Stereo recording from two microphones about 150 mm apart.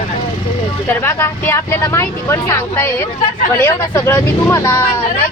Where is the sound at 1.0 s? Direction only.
15° left (ahead or behind).